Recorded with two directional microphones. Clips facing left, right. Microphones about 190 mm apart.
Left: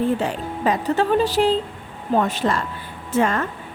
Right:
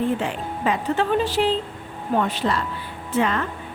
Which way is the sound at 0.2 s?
40° left (ahead or behind).